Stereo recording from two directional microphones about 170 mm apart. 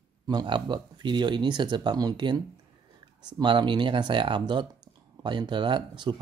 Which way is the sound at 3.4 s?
25° right (ahead or behind).